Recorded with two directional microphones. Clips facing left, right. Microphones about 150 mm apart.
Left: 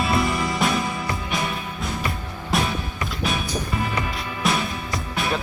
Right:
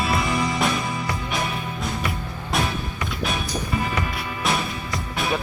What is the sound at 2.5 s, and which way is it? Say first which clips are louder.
Music: left 1 dB; centre (ahead or behind).